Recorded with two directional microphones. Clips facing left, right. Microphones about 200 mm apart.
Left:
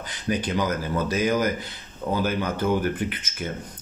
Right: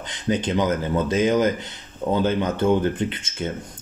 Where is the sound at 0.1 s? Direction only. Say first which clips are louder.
Right 3 dB; 25° right (ahead or behind).